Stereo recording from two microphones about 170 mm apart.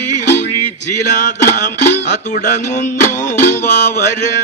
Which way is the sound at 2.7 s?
45° left (ahead or behind).